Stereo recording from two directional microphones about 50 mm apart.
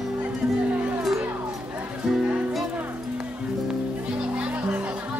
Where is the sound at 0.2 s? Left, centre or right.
Right.